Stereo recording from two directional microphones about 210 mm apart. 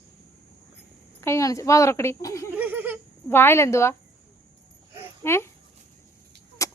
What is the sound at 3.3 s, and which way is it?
Speech, 10° left (ahead or behind).